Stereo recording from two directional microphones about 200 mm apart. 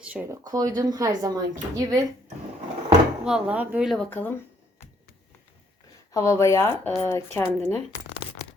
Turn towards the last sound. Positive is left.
turn(degrees=10)  # may be behind; listen again after turning